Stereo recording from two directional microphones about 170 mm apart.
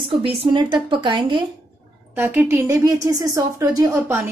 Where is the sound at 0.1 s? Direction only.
35° right (ahead or behind).